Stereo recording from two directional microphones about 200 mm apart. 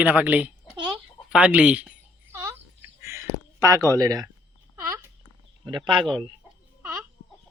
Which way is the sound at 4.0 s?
20° right (ahead or behind).